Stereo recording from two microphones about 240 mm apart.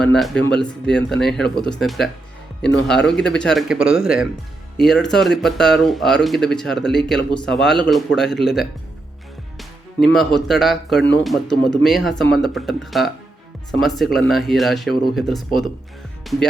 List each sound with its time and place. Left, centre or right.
0.0 s speech: centre